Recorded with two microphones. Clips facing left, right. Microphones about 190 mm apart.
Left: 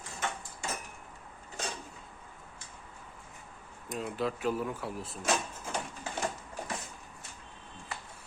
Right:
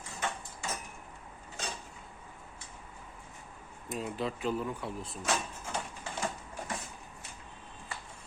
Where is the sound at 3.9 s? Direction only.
Centre (ahead or behind).